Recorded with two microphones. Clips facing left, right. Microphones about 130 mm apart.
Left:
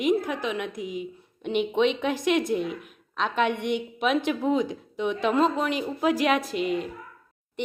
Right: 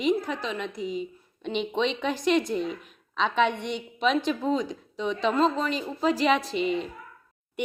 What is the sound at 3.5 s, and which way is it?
Speech, 55° left (ahead or behind).